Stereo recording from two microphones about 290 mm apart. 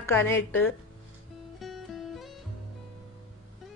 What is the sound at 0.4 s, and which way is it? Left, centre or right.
Speech, left.